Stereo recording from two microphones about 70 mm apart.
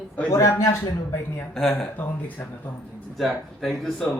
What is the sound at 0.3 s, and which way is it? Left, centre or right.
Speech, left.